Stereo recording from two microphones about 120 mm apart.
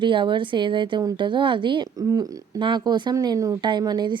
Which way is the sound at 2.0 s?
30° right (ahead or behind).